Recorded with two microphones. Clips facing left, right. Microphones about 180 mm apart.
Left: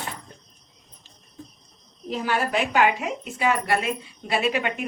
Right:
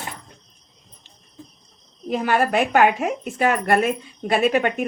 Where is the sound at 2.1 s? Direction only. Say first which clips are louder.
Right 5 dB; 55° right (ahead or behind).